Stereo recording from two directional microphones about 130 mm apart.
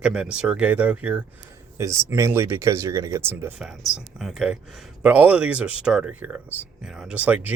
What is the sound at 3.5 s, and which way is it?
Speech, 5° right (ahead or behind).